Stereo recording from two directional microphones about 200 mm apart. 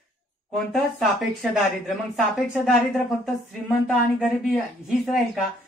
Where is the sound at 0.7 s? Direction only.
Centre (ahead or behind).